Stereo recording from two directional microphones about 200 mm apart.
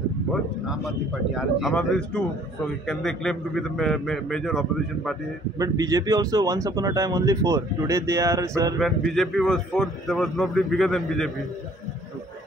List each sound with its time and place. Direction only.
0.3 s speech: centre (ahead or behind)
5.6 s speech: 15° right (ahead or behind)
8.7 s speech: centre (ahead or behind)